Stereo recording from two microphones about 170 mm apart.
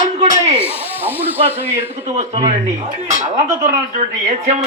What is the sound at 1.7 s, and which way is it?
Speech, 40° right (ahead or behind).